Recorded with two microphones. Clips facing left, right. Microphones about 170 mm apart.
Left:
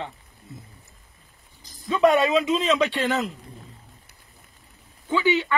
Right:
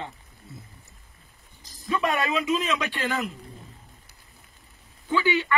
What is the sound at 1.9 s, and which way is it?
Speech, 25° left (ahead or behind).